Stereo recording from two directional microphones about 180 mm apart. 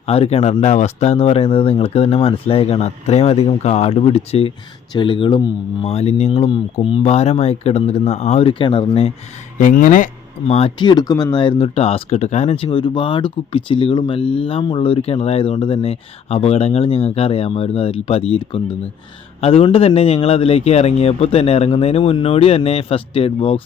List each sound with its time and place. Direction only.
0.1 s speech: 35° left (ahead or behind)
9.6 s speech: 50° left (ahead or behind)
10.5 s speech: 30° left (ahead or behind)